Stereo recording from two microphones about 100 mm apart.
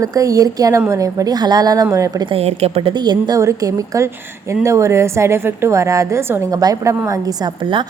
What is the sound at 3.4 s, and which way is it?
A woman's voice, 35° right (ahead or behind).